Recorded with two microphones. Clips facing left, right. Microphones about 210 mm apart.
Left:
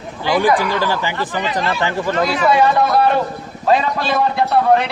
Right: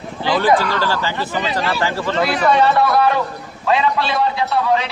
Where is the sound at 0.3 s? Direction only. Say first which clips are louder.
Even; 15° left (ahead or behind).